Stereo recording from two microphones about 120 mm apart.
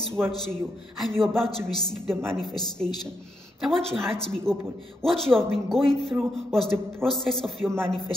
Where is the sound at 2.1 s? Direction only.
20° right (ahead or behind).